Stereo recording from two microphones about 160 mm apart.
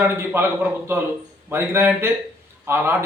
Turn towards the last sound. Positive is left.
turn(degrees=-15)  # may be behind; listen again after turning